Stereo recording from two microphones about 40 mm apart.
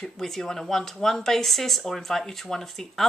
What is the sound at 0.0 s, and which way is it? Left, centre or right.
Speech, centre.